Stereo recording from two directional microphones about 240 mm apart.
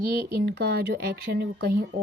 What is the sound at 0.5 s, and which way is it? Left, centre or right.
Speech, right.